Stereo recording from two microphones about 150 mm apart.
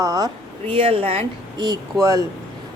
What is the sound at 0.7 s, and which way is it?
Speech, 35° right (ahead or behind).